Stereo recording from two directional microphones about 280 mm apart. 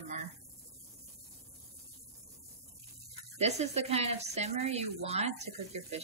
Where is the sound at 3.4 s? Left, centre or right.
Right.